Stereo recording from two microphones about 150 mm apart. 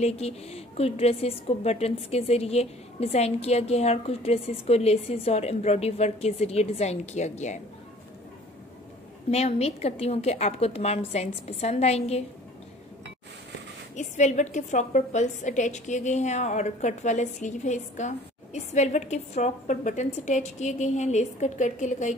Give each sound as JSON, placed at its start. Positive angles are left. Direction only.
{"t": 0.0, "sound": "a woman's voice", "side_deg": 45}
{"t": 9.3, "sound": "a woman's voice", "side_deg": 45}
{"t": 13.9, "sound": "a woman's voice", "side_deg": 50}